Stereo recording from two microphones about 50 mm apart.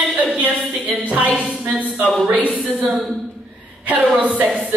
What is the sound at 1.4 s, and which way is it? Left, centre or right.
A woman's voice, right.